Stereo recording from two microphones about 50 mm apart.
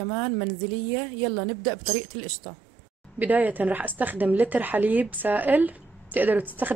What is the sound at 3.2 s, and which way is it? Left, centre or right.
A woman's voice, right.